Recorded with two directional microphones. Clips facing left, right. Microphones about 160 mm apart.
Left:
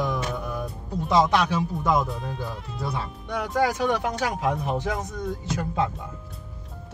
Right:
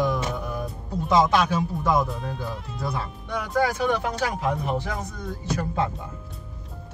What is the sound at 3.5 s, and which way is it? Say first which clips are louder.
Speech: even; 15° left (ahead or behind).